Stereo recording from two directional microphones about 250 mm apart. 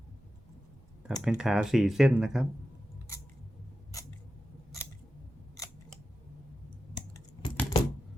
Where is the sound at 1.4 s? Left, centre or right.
Centre.